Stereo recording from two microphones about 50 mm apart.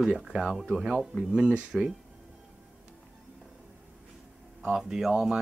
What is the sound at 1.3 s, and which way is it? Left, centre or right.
Speech, centre.